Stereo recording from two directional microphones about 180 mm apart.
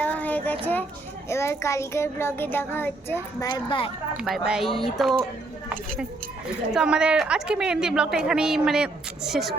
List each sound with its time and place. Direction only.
0.0 s child singing: 10° left (ahead or behind)
3.5 s speech: 30° left (ahead or behind)
4.2 s a woman's voice: 5° right (ahead or behind)
6.7 s a woman's voice: 5° right (ahead or behind)